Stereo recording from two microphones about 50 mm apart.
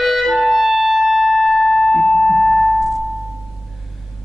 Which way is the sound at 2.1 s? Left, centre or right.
Centre.